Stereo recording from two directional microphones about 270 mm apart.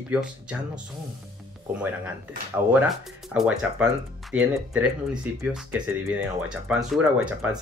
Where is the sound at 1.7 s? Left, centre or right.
Centre.